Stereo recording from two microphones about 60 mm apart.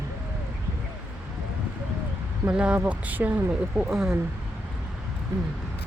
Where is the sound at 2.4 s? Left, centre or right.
Centre.